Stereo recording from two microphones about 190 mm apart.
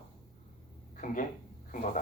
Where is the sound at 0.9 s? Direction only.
45° left (ahead or behind).